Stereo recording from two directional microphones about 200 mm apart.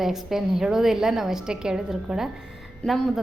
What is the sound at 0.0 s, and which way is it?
A woman's voice, centre (ahead or behind).